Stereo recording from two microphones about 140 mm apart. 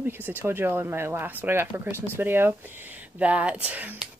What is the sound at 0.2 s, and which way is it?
Speech, 15° right (ahead or behind).